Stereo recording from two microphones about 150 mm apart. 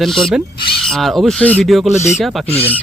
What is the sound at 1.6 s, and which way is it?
Speech, centre (ahead or behind).